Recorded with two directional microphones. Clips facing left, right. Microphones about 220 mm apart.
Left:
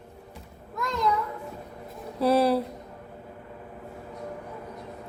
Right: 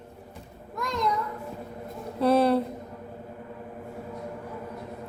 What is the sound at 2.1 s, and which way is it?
Speech, 5° left (ahead or behind).